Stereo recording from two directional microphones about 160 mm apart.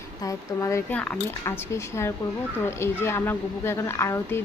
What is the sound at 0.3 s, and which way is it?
A woman's voice, 20° left (ahead or behind).